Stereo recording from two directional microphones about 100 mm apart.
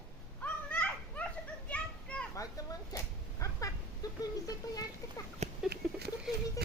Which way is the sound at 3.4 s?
30° left (ahead or behind).